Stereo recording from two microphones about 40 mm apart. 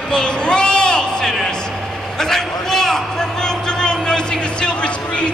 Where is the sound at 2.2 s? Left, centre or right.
Centre.